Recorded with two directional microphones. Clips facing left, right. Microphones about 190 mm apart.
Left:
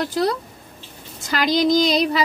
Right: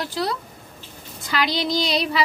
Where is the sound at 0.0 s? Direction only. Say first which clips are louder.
Left 5 dB; 45° left (ahead or behind).